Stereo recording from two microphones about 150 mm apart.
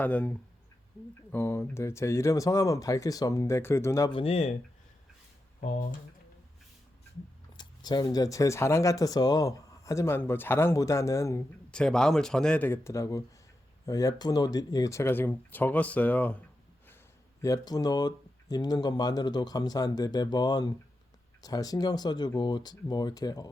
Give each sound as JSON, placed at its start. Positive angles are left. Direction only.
{"t": 0.0, "sound": "speech", "side_deg": 10}
{"t": 4.1, "sound": "speech", "side_deg": 40}
{"t": 7.5, "sound": "speech", "side_deg": 30}
{"t": 11.7, "sound": "speech", "side_deg": 5}
{"t": 17.4, "sound": "speech", "side_deg": 25}